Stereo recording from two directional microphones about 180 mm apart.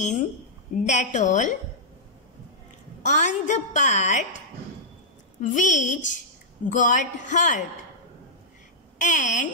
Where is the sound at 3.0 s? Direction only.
45° left (ahead or behind).